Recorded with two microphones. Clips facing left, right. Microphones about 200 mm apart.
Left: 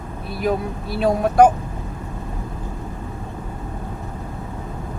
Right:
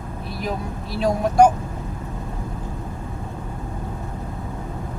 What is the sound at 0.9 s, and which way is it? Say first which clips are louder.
Speech: left 2 dB; 55° left (ahead or behind).